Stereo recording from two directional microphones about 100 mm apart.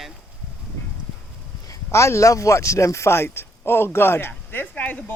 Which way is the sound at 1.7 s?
30° left (ahead or behind).